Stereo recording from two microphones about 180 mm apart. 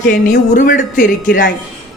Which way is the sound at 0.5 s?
45° left (ahead or behind).